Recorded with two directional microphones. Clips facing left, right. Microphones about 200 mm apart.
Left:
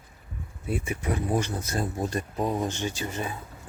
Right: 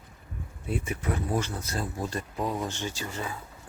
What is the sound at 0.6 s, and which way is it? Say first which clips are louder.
Speech: left 1 dB; 10° left (ahead or behind).